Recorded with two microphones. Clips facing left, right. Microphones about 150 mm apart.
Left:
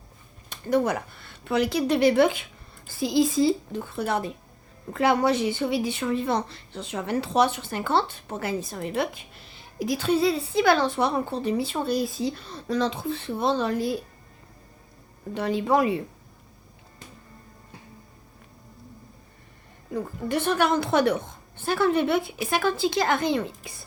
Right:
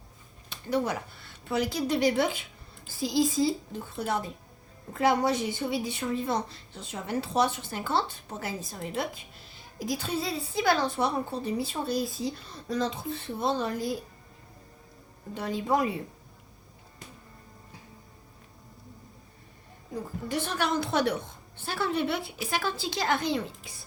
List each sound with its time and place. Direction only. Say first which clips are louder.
0.5 s a woman's voice: left 5 dB; 50° left (ahead or behind); by 13.9 s 70° left (ahead or behind)
15.4 s a woman's voice: left 5 dB; 75° left (ahead or behind)
19.9 s speech: left 5 dB; 60° left (ahead or behind)